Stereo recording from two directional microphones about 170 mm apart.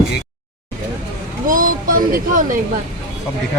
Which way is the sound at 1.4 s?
55° right (ahead or behind).